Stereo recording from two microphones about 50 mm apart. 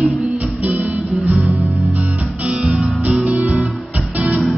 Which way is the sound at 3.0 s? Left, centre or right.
Right.